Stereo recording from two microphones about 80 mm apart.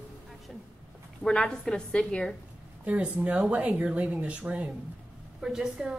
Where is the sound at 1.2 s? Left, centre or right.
Centre.